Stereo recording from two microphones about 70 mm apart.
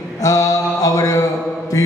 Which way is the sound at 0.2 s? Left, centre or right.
Left.